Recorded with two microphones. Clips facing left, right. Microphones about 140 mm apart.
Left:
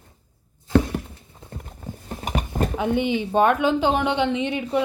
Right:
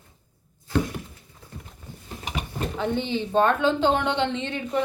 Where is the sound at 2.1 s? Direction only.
45° left (ahead or behind).